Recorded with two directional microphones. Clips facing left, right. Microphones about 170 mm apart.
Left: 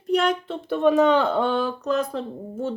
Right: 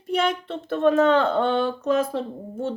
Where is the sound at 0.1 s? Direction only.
Centre (ahead or behind).